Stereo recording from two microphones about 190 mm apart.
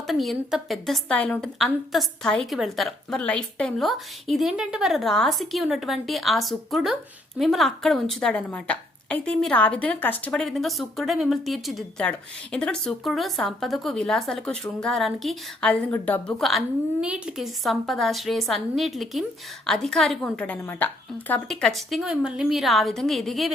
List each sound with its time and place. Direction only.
0.1 s a woman's voice: centre (ahead or behind)